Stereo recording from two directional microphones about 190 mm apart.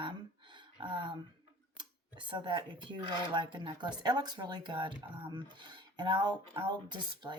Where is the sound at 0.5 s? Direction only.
25° right (ahead or behind).